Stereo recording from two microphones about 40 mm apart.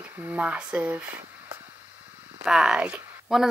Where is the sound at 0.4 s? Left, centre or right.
Right.